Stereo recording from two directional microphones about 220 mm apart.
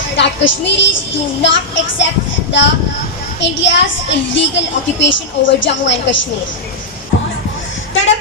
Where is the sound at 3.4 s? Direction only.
55° left (ahead or behind).